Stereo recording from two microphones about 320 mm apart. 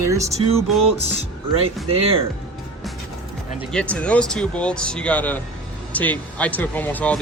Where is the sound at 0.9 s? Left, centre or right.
Centre.